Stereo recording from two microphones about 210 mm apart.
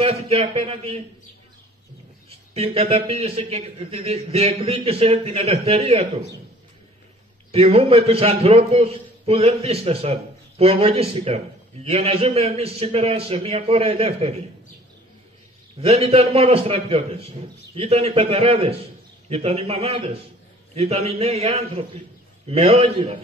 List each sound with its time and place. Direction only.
0.0 s a man's voice: 30° right (ahead or behind)
2.2 s a man's voice: 30° right (ahead or behind)
7.5 s a man's voice: 30° right (ahead or behind)
15.8 s a man's voice: 30° right (ahead or behind)